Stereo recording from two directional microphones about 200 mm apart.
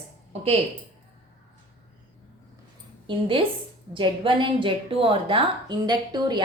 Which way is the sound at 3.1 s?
25° right (ahead or behind).